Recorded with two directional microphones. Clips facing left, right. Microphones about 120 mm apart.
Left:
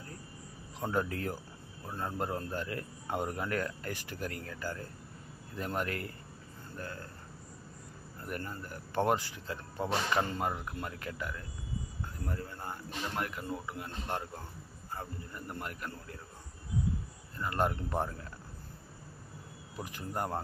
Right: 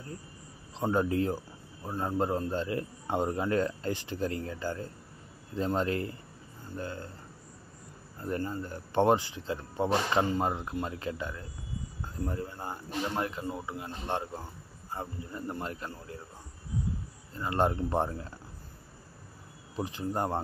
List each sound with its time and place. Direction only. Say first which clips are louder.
0.7 s a man's voice: right 6 dB; 25° right (ahead or behind)
8.2 s a man's voice: right 7 dB; 25° right (ahead or behind)
17.4 s a man's voice: right 4 dB; 25° right (ahead or behind)
19.8 s a man's voice: right 5 dB; 25° right (ahead or behind)